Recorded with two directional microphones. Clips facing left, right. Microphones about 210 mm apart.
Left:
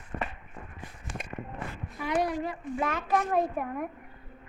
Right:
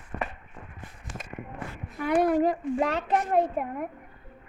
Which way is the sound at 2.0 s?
55° right (ahead or behind).